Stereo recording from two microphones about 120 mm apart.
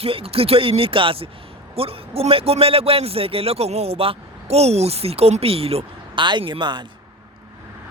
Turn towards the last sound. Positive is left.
turn(degrees=-40)  # may be behind; listen again after turning